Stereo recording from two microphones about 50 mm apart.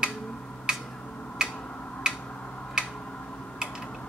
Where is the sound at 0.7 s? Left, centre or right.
Centre.